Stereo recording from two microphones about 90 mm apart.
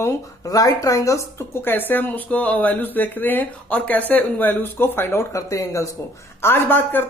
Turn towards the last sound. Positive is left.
turn(degrees=20)  # may be behind; listen again after turning